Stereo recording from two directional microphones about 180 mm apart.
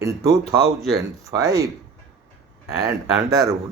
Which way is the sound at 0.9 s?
20° right (ahead or behind).